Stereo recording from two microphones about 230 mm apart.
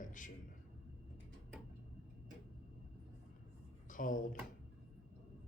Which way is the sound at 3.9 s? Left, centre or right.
Left.